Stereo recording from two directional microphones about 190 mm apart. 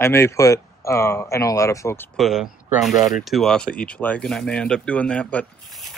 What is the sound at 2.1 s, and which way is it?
Speech, centre (ahead or behind).